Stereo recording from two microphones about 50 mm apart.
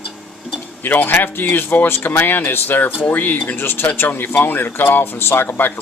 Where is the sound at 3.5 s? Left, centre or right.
Left.